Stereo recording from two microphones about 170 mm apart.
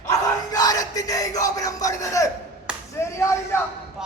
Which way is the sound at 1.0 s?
20° left (ahead or behind).